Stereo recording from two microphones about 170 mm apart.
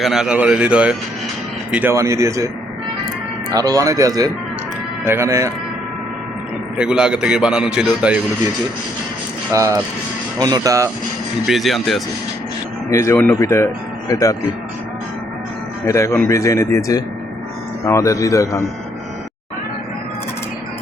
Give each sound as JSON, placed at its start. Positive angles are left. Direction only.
{"t": 0.0, "sound": "a man's voice", "side_deg": -5}
{"t": 3.5, "sound": "speech", "side_deg": -20}
{"t": 6.7, "sound": "a man's voice", "side_deg": -5}
{"t": 9.5, "sound": "speech", "side_deg": -20}
{"t": 11.4, "sound": "a man's voice", "side_deg": 0}
{"t": 12.9, "sound": "speech", "side_deg": 15}
{"t": 15.9, "sound": "speech", "side_deg": 15}